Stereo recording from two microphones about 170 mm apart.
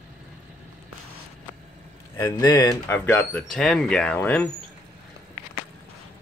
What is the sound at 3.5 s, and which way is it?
Speech, centre (ahead or behind).